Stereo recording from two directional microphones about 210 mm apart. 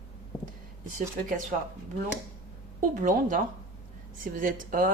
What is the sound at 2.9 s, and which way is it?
A woman's voice, 40° right (ahead or behind).